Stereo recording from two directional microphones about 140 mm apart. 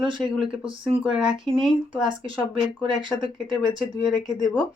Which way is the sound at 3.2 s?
5° right (ahead or behind).